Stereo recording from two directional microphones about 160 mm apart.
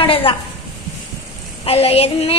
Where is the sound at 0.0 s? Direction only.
35° left (ahead or behind).